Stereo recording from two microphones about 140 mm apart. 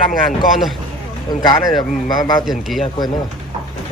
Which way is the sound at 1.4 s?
30° left (ahead or behind).